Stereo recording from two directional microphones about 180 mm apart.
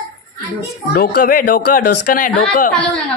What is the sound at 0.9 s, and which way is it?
Speech, 55° left (ahead or behind).